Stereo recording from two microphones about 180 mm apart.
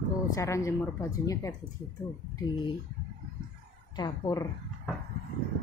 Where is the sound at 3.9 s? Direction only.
25° left (ahead or behind).